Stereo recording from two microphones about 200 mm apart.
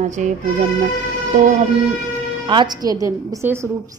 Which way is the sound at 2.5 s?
20° right (ahead or behind).